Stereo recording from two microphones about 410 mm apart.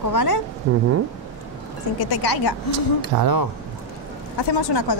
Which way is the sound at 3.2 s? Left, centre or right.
Right.